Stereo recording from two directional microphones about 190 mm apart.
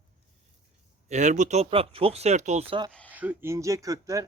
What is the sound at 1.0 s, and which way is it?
Speech, 40° right (ahead or behind).